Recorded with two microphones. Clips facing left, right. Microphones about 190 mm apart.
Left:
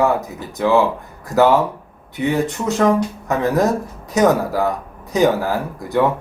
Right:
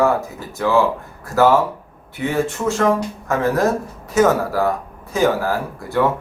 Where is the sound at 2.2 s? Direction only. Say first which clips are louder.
Left 1 dB; 20° left (ahead or behind).